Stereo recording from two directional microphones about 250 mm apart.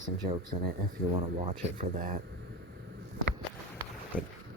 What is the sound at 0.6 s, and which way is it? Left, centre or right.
Speech, right.